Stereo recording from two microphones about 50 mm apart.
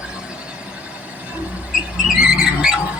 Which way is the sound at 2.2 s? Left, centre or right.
Centre.